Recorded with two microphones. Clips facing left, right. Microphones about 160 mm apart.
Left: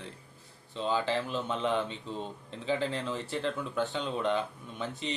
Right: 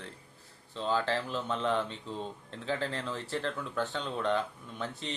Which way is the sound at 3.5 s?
20° left (ahead or behind).